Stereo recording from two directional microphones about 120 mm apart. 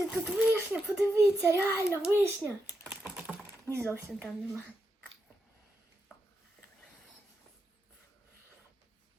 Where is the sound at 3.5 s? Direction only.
20° right (ahead or behind).